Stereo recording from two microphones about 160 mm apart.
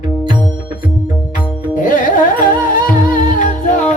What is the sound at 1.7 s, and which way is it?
Music, 55° left (ahead or behind).